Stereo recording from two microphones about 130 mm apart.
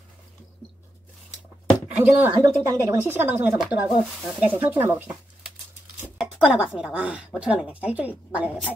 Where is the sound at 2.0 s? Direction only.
15° right (ahead or behind).